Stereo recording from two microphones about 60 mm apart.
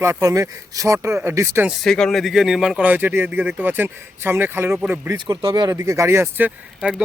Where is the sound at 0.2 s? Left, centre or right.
Right.